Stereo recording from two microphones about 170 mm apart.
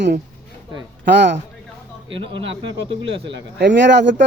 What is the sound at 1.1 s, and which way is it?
Speech, 90° right.